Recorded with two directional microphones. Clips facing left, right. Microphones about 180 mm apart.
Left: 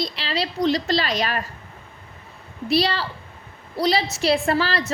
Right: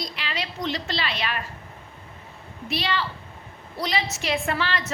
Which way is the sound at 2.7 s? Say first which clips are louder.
Left 6 dB; 35° left (ahead or behind).